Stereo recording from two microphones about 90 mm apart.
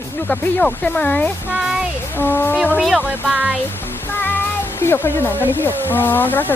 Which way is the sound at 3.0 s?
20° right (ahead or behind).